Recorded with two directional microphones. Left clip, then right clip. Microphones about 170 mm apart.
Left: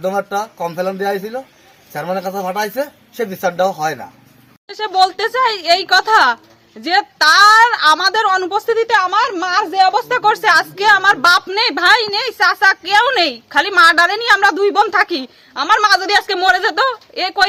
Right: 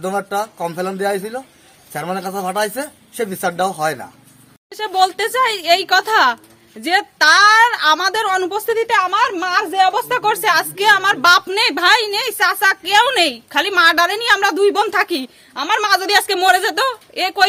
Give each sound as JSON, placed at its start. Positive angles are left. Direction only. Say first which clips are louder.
{"t": 0.0, "sound": "a man's voice", "louder": "left 2 dB", "side_deg": 0}
{"t": 5.0, "sound": "a woman's voice", "louder": "left 1 dB", "side_deg": -45}
{"t": 9.0, "sound": "a man's voice", "louder": "left 1 dB", "side_deg": 0}
{"t": 10.2, "sound": "a woman's voice", "louder": "left 4 dB", "side_deg": -50}
{"t": 16.5, "sound": "speech", "louder": "left 3 dB", "side_deg": -15}